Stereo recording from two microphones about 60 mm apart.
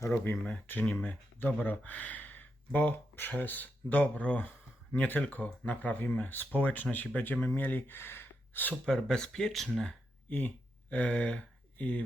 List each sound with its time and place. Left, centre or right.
0.1 s speech: left
4.9 s speech: left
8.9 s speech: centre
10.2 s speech: left